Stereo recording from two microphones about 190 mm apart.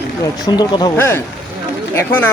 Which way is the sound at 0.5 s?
20° left (ahead or behind).